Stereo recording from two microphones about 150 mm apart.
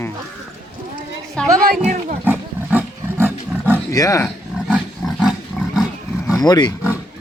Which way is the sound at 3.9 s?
20° left (ahead or behind).